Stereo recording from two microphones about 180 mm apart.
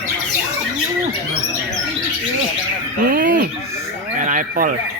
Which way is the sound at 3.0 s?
50° right (ahead or behind).